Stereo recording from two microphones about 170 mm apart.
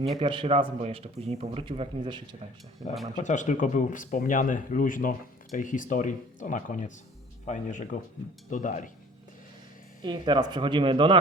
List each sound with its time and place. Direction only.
0.2 s a man's voice: 35° right (ahead or behind)
3.2 s speech: 45° left (ahead or behind)
10.0 s speech: 25° right (ahead or behind)